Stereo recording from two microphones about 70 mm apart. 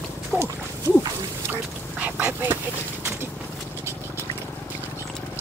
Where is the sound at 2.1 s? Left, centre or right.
Right.